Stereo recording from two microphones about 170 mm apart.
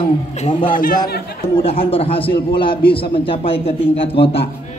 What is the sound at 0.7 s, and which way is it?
Speech, 55° left (ahead or behind).